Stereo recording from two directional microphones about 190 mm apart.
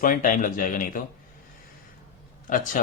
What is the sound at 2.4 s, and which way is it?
Speech, 45° left (ahead or behind).